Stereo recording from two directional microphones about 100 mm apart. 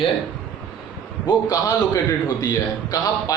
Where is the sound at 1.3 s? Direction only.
40° left (ahead or behind).